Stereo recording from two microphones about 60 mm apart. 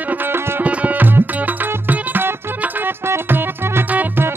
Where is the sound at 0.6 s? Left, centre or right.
Right.